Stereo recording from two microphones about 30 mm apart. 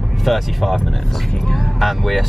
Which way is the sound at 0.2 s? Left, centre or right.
Centre.